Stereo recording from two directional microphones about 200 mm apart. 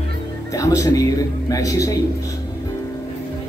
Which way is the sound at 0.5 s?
15° left (ahead or behind).